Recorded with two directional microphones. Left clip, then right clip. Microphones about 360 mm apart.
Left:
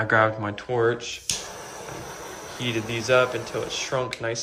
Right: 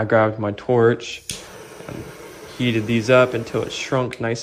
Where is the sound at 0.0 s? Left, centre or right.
Centre; by 1.2 s right.